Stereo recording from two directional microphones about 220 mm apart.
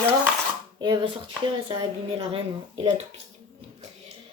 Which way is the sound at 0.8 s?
20° right (ahead or behind).